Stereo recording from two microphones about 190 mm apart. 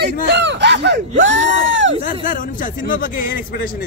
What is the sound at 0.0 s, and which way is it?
Speech, 65° right (ahead or behind).